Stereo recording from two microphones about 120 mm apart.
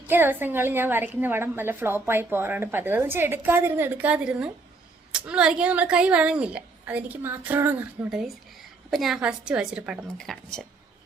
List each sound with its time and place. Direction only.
0.1 s a woman's voice: 15° right (ahead or behind)
8.9 s a woman's voice: centre (ahead or behind)